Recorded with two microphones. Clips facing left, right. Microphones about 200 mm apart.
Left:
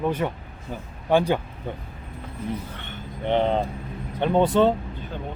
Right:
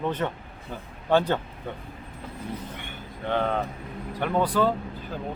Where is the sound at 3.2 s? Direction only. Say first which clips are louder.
Left 4 dB; 20° left (ahead or behind).